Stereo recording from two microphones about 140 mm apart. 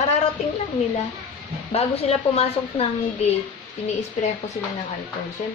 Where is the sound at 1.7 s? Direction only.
45° left (ahead or behind).